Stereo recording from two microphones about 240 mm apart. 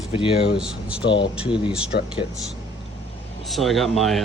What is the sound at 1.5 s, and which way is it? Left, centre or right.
Speech, centre.